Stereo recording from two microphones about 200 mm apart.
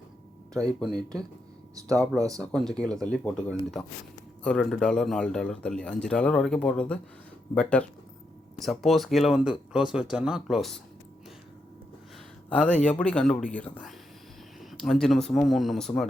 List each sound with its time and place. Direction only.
1.9 s speech: 15° right (ahead or behind)
2.4 s a man's voice: 5° left (ahead or behind)
12.5 s a man's voice: 5° left (ahead or behind)